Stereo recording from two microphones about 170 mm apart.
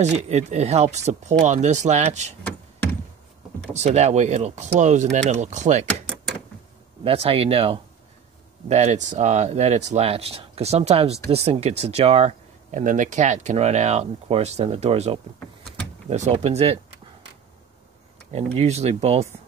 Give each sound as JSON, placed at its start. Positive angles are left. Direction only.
{"t": 0.0, "sound": "speech", "side_deg": -40}
{"t": 3.7, "sound": "speech", "side_deg": -40}
{"t": 5.9, "sound": "door", "side_deg": 5}
{"t": 7.1, "sound": "speech", "side_deg": -35}
{"t": 18.3, "sound": "speech", "side_deg": -40}